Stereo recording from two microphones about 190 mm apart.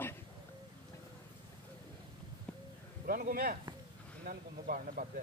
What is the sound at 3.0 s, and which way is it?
Speech, 50° right (ahead or behind).